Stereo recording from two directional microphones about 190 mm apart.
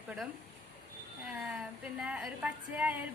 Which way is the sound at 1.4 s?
5° right (ahead or behind).